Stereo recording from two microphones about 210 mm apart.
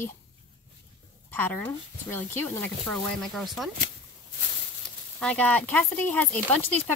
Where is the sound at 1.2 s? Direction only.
10° left (ahead or behind).